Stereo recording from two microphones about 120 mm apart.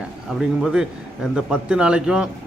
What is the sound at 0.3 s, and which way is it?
A man's voice, 5° right (ahead or behind).